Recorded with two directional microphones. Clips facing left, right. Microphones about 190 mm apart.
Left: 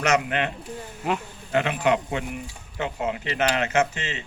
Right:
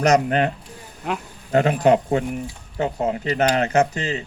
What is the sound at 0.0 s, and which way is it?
Speech, 35° right (ahead or behind).